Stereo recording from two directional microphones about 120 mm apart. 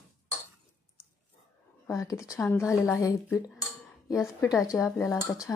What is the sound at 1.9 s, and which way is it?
Speech, 25° left (ahead or behind).